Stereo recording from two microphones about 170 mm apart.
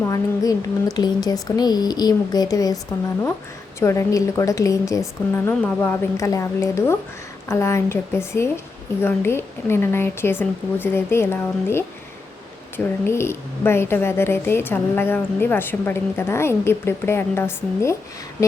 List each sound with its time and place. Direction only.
0.0 s speech: 20° left (ahead or behind)
3.8 s a woman's voice: 15° left (ahead or behind)